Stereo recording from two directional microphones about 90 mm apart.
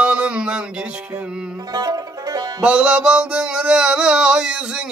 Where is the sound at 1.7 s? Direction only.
40° right (ahead or behind).